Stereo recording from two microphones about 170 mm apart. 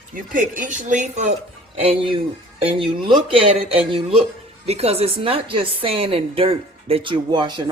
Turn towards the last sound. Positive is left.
turn(degrees=-25)  # may be behind; listen again after turning